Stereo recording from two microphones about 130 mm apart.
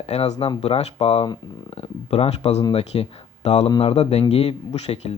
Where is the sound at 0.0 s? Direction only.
55° left (ahead or behind).